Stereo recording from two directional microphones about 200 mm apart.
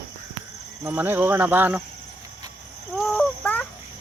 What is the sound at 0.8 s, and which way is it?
Cricket, 10° right (ahead or behind).